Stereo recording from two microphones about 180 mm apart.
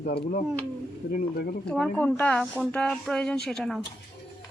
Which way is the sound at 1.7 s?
5° left (ahead or behind).